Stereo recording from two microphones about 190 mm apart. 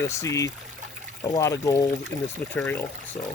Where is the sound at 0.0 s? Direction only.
15° left (ahead or behind).